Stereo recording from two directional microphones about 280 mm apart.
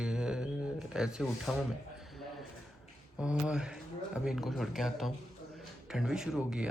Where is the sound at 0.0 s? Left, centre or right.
Centre.